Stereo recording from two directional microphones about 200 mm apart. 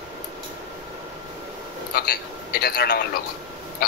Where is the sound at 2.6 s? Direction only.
55° left (ahead or behind).